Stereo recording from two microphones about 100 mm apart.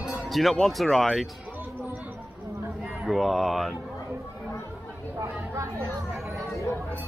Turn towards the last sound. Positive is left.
turn(degrees=-30)  # may be behind; listen again after turning